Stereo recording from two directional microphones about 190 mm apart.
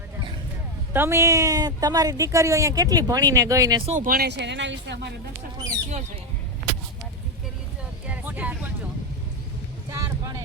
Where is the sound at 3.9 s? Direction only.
45° right (ahead or behind); by 5.1 s 65° right (ahead or behind).